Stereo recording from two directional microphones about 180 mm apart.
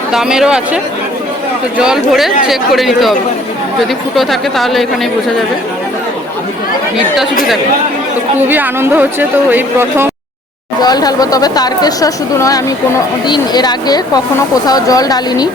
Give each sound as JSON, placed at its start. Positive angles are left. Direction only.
{"t": 0.1, "sound": "speech", "side_deg": -5}
{"t": 1.8, "sound": "speech", "side_deg": 0}
{"t": 8.4, "sound": "a woman's voice", "side_deg": -10}
{"t": 10.8, "sound": "speech", "side_deg": 20}